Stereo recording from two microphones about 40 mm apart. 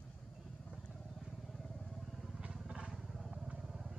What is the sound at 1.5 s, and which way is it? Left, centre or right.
Vehicle, centre.